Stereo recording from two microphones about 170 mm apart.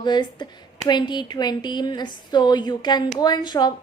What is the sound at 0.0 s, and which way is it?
Speech, 25° left (ahead or behind).